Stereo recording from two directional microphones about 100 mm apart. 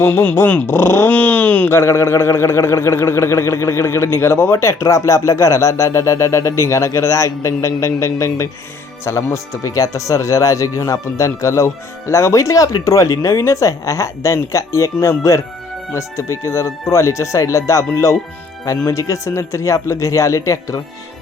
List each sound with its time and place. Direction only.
0.0 s speech: 20° left (ahead or behind)
18.9 s speech: 30° left (ahead or behind)